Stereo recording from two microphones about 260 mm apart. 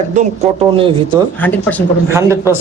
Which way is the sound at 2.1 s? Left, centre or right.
Centre.